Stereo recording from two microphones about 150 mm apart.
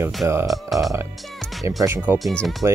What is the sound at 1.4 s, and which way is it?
Music, centre (ahead or behind).